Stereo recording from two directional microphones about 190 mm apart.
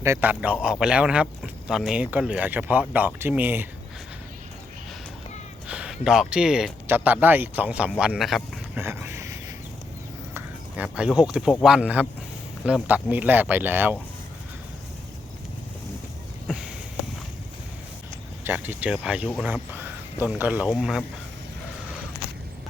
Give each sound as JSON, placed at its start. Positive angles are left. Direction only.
{"t": 0.0, "sound": "a man's voice", "side_deg": -15}
{"t": 5.6, "sound": "a man's voice", "side_deg": -5}
{"t": 8.8, "sound": "speech", "side_deg": -10}
{"t": 10.3, "sound": "a man's voice", "side_deg": -5}
{"t": 16.5, "sound": "a sound", "side_deg": -5}
{"t": 18.4, "sound": "a man's voice", "side_deg": -10}